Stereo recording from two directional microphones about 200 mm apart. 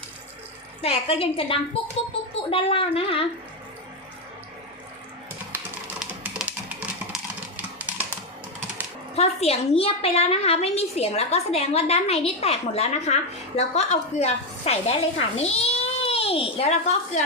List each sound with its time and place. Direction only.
0.8 s a woman's voice: 30° left (ahead or behind)
6.0 s typing: 5° right (ahead or behind)
9.1 s a woman's voice: 30° left (ahead or behind)